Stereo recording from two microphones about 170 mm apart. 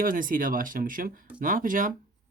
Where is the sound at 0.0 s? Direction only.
55° right (ahead or behind).